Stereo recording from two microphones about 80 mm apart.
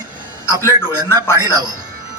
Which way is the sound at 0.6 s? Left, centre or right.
Left.